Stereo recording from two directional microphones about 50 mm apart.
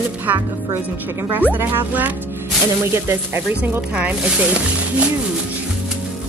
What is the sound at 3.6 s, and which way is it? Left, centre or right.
Speech, right.